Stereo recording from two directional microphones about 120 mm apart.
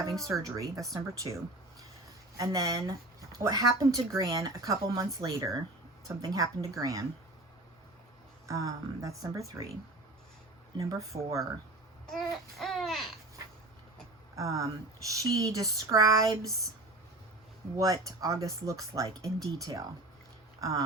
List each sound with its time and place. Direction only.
0.3 s speech: 30° right (ahead or behind)
2.4 s speech: 30° right (ahead or behind)
8.4 s speech: 25° right (ahead or behind)
10.8 s speech: 25° right (ahead or behind)
12.0 s babbling: centre (ahead or behind)
14.3 s speech: 25° right (ahead or behind)
17.7 s speech: 30° right (ahead or behind)